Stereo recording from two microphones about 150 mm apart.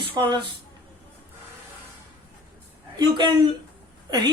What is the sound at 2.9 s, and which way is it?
Speech, 30° right (ahead or behind).